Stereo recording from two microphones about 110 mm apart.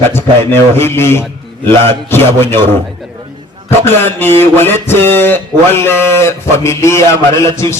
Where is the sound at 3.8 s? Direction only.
20° left (ahead or behind).